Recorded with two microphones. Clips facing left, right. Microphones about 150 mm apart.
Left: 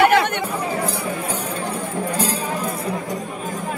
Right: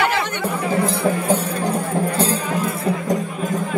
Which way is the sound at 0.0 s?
60° left (ahead or behind).